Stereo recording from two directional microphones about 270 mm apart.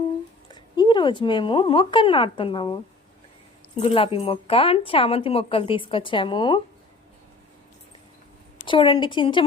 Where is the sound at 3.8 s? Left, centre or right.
Centre.